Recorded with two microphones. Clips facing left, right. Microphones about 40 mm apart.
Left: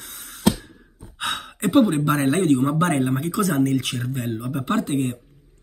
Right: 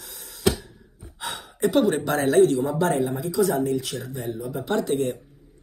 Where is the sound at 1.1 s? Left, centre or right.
Left.